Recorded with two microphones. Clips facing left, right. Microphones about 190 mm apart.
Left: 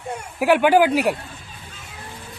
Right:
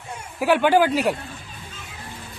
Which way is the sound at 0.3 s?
15° left (ahead or behind).